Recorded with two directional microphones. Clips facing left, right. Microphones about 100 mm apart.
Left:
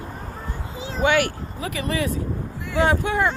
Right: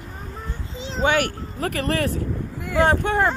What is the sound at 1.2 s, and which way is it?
Speech, 50° right (ahead or behind).